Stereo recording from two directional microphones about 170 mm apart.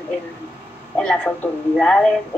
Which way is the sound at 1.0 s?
5° left (ahead or behind).